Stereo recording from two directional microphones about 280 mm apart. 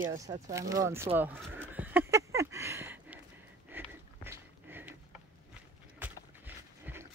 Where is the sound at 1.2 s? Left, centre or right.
Centre.